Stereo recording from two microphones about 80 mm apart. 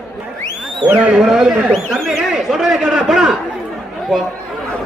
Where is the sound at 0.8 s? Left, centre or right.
Centre.